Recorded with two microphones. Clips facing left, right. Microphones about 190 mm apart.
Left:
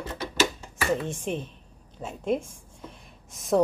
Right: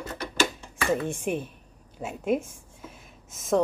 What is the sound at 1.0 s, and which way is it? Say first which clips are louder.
Speech: right 2 dB; 10° right (ahead or behind).